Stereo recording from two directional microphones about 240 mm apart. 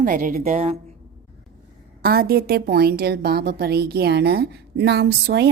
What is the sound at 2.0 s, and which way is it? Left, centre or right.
A woman's voice, right.